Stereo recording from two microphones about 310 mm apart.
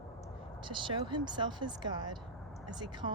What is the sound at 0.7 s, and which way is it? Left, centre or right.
Speech, centre.